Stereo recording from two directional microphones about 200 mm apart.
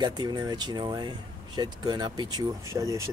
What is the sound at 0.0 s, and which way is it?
Speech, 20° right (ahead or behind).